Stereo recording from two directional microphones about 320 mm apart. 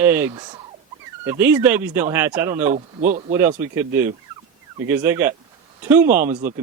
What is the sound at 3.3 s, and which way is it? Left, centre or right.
Speech, centre.